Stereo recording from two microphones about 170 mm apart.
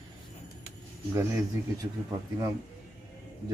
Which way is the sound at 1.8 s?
20° right (ahead or behind).